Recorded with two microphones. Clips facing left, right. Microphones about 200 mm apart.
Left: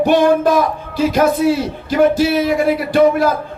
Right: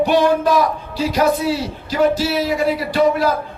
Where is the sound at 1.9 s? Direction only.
50° left (ahead or behind).